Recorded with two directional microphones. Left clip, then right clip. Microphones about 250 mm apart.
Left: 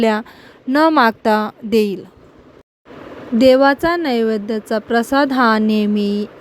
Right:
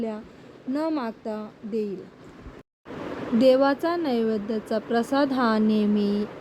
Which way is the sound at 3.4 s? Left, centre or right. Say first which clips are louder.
Left 8 dB; left.